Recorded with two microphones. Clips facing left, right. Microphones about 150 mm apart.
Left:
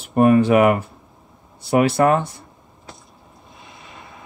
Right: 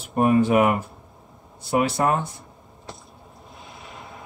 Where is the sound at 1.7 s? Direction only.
70° left (ahead or behind).